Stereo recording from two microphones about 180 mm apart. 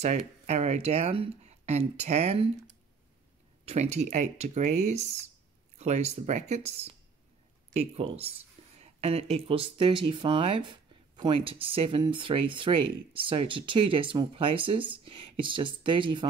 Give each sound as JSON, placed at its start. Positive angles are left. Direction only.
{"t": 0.0, "sound": "speech", "side_deg": -35}
{"t": 3.6, "sound": "speech", "side_deg": -40}